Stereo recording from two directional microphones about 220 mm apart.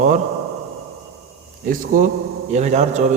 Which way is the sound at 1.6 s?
40° right (ahead or behind).